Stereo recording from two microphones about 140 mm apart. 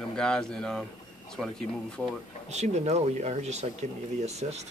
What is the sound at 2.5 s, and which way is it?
Speech, 55° right (ahead or behind).